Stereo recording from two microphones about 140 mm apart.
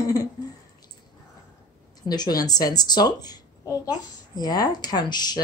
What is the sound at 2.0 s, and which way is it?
A woman's voice, 30° left (ahead or behind).